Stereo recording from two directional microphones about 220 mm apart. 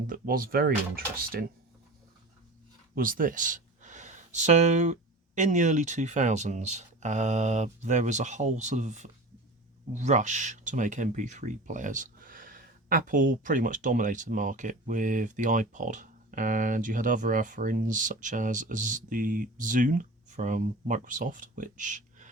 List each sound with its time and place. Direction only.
0.1 s speech: 40° right (ahead or behind)
2.9 s speech: 40° right (ahead or behind)